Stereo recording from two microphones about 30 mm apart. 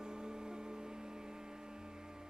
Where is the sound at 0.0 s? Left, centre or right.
Right.